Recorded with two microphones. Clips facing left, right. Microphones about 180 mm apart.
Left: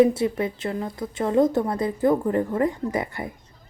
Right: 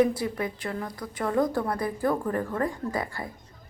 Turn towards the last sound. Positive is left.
turn(degrees=20)  # may be behind; listen again after turning